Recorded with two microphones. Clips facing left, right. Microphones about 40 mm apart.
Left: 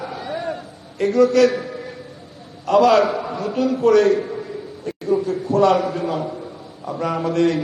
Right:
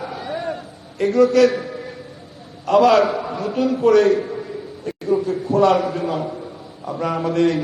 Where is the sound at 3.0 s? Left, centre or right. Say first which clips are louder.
Even; centre.